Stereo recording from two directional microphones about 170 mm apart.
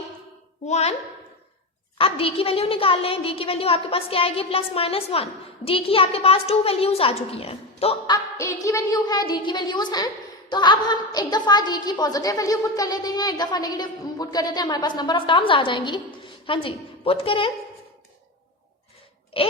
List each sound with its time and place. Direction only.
0.6 s a woman's voice: 40° left (ahead or behind)
2.0 s a woman's voice: 35° left (ahead or behind)
8.1 s a woman's voice: 20° left (ahead or behind)
19.3 s speech: 30° left (ahead or behind)